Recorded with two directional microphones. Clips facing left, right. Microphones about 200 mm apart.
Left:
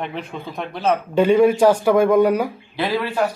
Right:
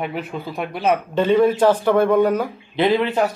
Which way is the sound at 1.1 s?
10° left (ahead or behind).